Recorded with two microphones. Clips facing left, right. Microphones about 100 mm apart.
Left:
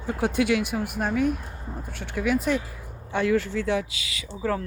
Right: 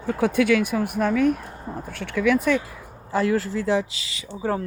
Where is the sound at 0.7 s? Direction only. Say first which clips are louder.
Right 4 dB; 90° right.